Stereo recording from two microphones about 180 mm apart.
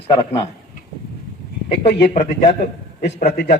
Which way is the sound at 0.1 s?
25° left (ahead or behind).